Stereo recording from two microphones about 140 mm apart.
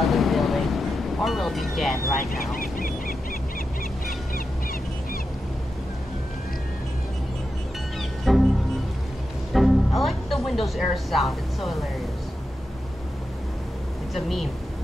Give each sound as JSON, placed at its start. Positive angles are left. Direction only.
{"t": 0.0, "sound": "a sound", "side_deg": 0}
{"t": 1.8, "sound": "speech", "side_deg": 0}
{"t": 2.5, "sound": "a sound", "side_deg": 90}
{"t": 8.3, "sound": "music", "side_deg": 0}
{"t": 9.5, "sound": "music", "side_deg": 0}
{"t": 14.1, "sound": "speech", "side_deg": 0}